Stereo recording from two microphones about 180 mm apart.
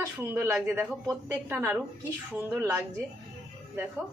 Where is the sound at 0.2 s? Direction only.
10° right (ahead or behind).